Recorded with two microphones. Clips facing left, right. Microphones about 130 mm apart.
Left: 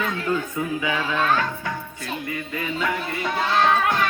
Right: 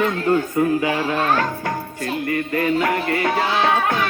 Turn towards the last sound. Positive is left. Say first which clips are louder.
# right 2 dB
turn(degrees=-70)  # may be behind; listen again after turning